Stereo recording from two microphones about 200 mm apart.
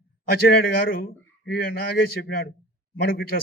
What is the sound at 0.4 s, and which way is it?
A man's voice, 45° left (ahead or behind).